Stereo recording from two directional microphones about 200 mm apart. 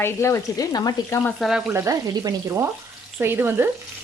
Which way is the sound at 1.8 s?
20° right (ahead or behind).